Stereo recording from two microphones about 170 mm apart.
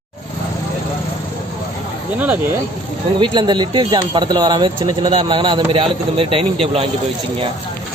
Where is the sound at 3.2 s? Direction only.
25° right (ahead or behind).